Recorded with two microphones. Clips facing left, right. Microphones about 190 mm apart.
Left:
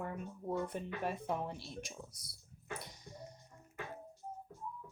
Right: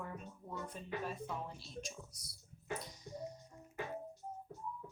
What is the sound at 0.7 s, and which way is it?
Speech, 65° left (ahead or behind).